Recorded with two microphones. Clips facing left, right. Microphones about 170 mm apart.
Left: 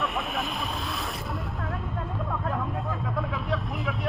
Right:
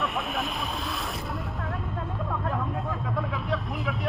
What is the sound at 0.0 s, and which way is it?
Vehicle, centre (ahead or behind).